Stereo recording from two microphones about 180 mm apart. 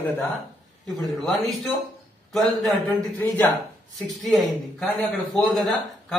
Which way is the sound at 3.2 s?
10° left (ahead or behind).